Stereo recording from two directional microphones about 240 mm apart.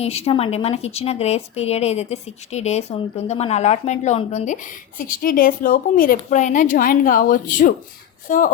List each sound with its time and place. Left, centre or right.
0.0 s speech: left